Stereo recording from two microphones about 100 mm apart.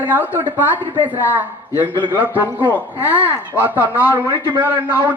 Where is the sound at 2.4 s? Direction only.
20° left (ahead or behind).